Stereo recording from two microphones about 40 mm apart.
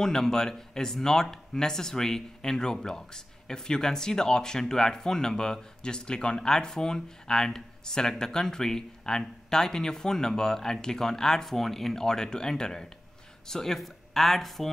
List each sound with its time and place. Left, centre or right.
0.0 s speech: centre